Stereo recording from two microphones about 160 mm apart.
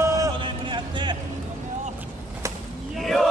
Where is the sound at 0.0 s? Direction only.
20° right (ahead or behind).